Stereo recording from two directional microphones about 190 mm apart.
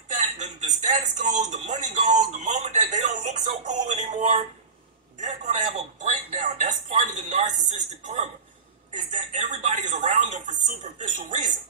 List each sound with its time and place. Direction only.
0.1 s speech: 35° right (ahead or behind)